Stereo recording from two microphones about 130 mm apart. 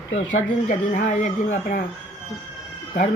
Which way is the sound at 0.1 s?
70° left (ahead or behind).